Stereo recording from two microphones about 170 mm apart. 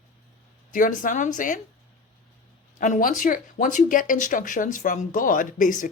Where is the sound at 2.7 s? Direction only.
50° left (ahead or behind).